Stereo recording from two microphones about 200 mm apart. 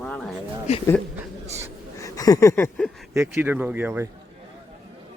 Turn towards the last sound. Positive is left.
turn(degrees=-10)  # may be behind; listen again after turning